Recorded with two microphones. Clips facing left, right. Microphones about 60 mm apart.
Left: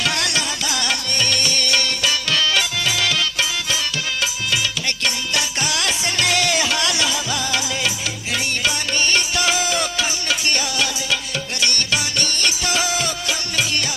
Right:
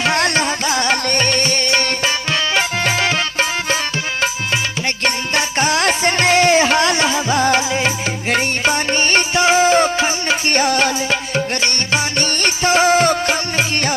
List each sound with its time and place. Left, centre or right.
0.0 s music: right
5.0 s music: right